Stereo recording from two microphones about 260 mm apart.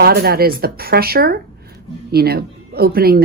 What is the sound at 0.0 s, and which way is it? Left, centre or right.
A woman's voice, right.